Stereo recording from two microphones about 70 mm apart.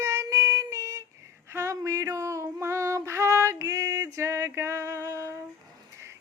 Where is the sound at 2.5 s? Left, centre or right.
Right.